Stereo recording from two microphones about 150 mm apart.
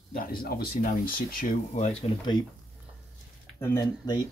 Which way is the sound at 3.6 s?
20° left (ahead or behind).